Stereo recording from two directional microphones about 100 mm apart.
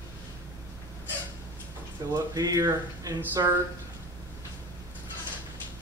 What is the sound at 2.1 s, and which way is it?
Speech, 40° right (ahead or behind).